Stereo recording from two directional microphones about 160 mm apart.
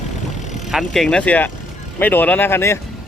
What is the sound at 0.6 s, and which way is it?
Speech, centre (ahead or behind).